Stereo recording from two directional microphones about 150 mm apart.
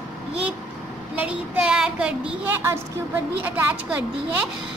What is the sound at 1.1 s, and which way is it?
A woman's voice, 5° right (ahead or behind).